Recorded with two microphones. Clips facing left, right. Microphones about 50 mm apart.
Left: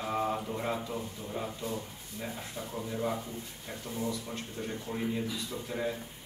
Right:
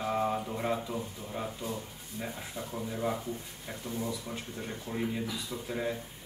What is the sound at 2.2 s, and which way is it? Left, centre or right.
A man's voice, centre.